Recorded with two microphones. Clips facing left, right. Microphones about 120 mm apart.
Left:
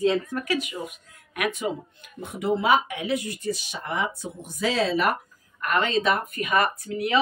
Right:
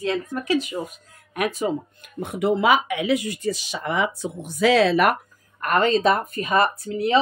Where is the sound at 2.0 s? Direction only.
60° right (ahead or behind).